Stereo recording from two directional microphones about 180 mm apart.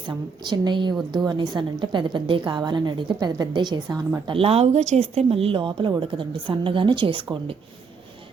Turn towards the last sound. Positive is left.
turn(degrees=-30)  # may be behind; listen again after turning